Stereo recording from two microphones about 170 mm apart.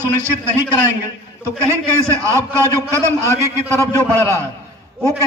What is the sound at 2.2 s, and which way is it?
A man's voice, 15° right (ahead or behind).